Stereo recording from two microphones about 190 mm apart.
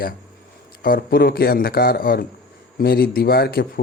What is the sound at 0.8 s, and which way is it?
Speech, 50° left (ahead or behind).